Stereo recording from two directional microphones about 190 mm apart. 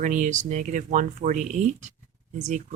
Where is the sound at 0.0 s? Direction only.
40° right (ahead or behind).